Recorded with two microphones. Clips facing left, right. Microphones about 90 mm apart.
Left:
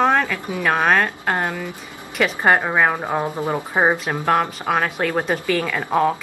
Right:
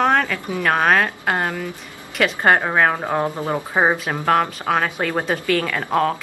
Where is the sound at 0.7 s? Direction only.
Centre (ahead or behind).